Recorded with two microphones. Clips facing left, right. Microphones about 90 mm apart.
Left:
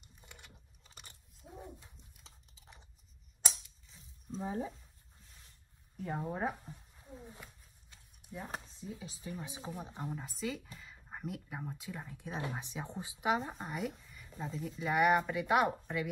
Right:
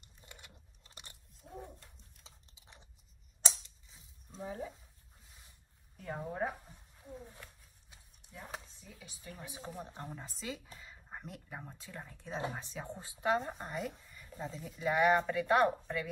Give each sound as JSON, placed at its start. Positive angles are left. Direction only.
{"t": 0.0, "sound": "a sound", "side_deg": 0}
{"t": 4.4, "sound": "speech", "side_deg": 20}
{"t": 5.9, "sound": "speech", "side_deg": 15}
{"t": 8.2, "sound": "chopping", "side_deg": 5}
{"t": 8.8, "sound": "speech", "side_deg": 30}
{"t": 9.6, "sound": "speech", "side_deg": 10}
{"t": 10.1, "sound": "speech", "side_deg": 0}
{"t": 12.5, "sound": "speech", "side_deg": 20}
{"t": 13.4, "sound": "speech", "side_deg": 0}